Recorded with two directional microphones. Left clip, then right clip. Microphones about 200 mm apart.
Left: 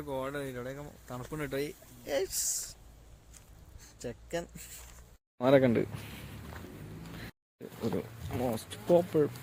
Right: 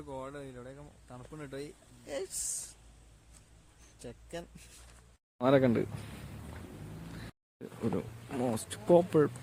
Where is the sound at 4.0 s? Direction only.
5° left (ahead or behind).